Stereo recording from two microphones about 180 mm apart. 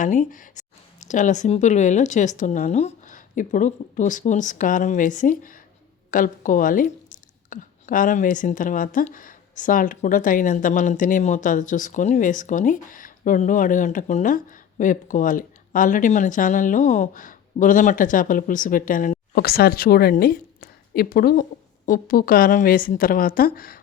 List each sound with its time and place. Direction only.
0.0 s speech: 45° left (ahead or behind)